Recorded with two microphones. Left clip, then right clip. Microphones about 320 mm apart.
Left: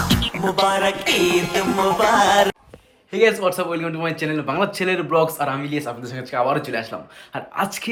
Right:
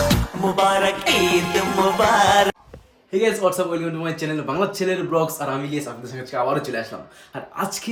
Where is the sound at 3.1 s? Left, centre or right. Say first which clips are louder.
Left 2 dB; centre.